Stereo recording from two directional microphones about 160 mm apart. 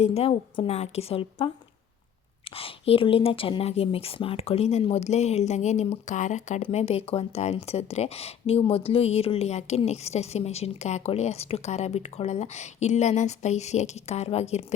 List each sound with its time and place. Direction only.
0.0 s speech: 40° left (ahead or behind)